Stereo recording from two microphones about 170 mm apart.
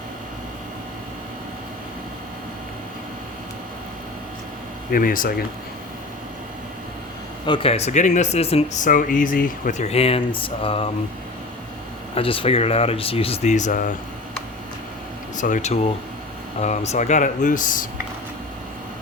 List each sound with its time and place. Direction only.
4.9 s speech: 55° left (ahead or behind)
7.4 s speech: 30° left (ahead or behind); by 9.8 s 55° left (ahead or behind)
9.8 s speech: 35° left (ahead or behind)
12.1 s speech: 30° left (ahead or behind); by 13.9 s 50° left (ahead or behind)
15.4 s speech: 50° left (ahead or behind)